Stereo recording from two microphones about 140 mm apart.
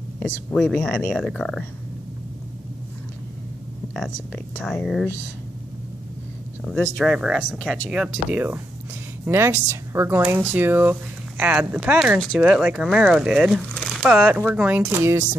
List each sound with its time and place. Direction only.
0.2 s speech: 5° left (ahead or behind)
4.6 s speech: centre (ahead or behind)
7.0 s speech: 5° right (ahead or behind)
7.5 s speech: 5° left (ahead or behind)
7.9 s speech: 10° right (ahead or behind)
12.2 s speech: 5° left (ahead or behind); by 15.2 s 15° right (ahead or behind)